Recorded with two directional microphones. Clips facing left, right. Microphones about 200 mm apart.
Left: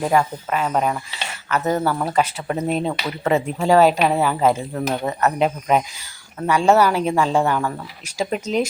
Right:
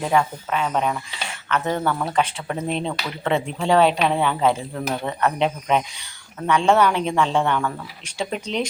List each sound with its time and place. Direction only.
0.0 s speech: 5° left (ahead or behind)
4.9 s speech: 15° left (ahead or behind)
5.2 s speech: 5° left (ahead or behind)